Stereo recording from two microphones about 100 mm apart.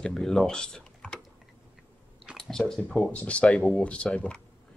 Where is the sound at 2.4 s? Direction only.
5° left (ahead or behind).